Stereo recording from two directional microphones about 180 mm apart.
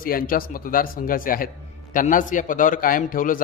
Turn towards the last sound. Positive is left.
turn(degrees=50)  # may be behind; listen again after turning